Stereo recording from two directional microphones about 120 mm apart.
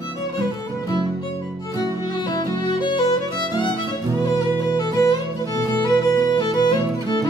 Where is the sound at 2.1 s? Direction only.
35° left (ahead or behind).